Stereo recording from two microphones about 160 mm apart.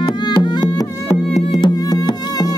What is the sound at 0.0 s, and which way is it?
Music, 30° left (ahead or behind).